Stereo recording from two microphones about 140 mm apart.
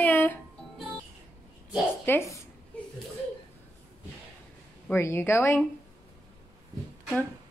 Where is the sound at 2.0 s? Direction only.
20° left (ahead or behind).